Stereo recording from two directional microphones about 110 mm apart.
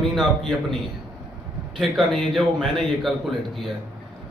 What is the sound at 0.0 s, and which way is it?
Speech, centre (ahead or behind).